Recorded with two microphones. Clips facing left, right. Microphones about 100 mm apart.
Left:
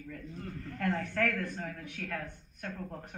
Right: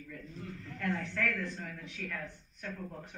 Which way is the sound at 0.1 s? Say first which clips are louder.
Left 3 dB; 45° left (ahead or behind).